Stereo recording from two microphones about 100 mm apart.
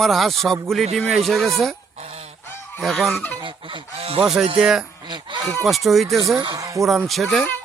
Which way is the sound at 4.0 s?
75° right (ahead or behind).